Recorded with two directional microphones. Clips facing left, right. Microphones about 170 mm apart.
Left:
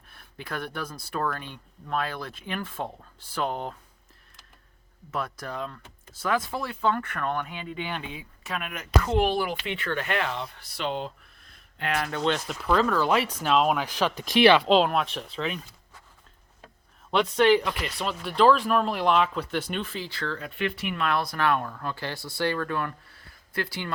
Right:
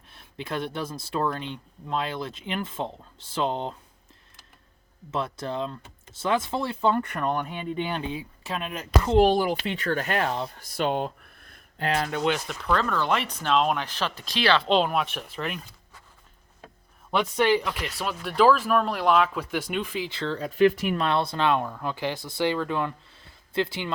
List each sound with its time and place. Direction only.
0.1 s speech: 20° right (ahead or behind)
5.1 s speech: 25° right (ahead or behind)
7.4 s speech: 30° right (ahead or behind); by 11.6 s 55° right (ahead or behind)
11.8 s speech: 30° right (ahead or behind)
12.5 s speech: 5° left (ahead or behind)
14.7 s speech: centre (ahead or behind)
17.1 s speech: 5° right (ahead or behind); by 23.9 s 20° right (ahead or behind)